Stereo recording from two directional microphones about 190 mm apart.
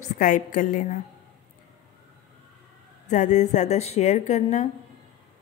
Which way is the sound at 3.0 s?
40° left (ahead or behind).